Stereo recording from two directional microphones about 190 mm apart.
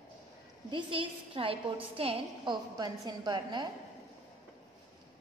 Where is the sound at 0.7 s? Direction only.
25° right (ahead or behind).